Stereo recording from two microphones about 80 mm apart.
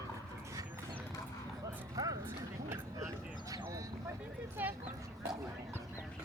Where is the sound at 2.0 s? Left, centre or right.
Right.